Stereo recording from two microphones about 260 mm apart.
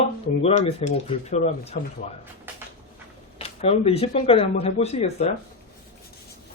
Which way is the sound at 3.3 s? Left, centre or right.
Left.